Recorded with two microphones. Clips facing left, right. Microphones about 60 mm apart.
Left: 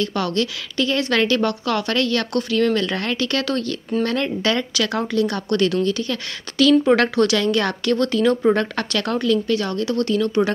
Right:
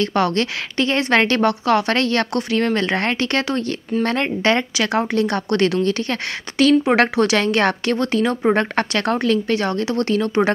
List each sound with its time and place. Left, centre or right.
0.0 s a woman's voice: right
6.9 s a woman's voice: right